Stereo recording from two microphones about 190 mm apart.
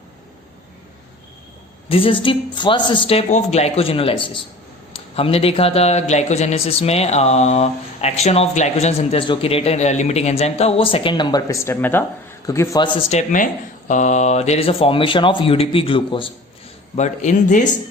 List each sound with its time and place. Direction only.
1.9 s speech: 30° left (ahead or behind)
13.0 s speech: 35° left (ahead or behind)
16.9 s speech: 40° left (ahead or behind)